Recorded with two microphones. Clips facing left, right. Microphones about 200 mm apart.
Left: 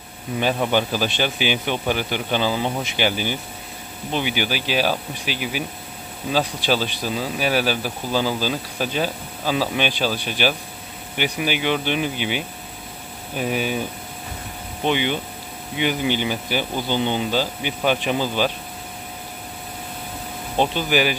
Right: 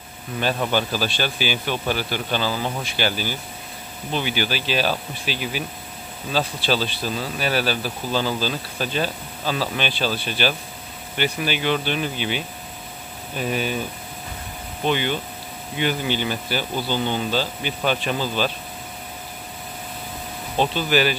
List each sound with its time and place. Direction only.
0.4 s speech: 15° left (ahead or behind)
14.9 s speech: 15° left (ahead or behind)
20.5 s speech: 15° left (ahead or behind)